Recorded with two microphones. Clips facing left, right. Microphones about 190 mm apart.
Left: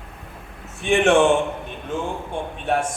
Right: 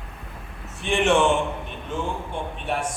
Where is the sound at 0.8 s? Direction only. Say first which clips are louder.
Left 4 dB; 50° left (ahead or behind).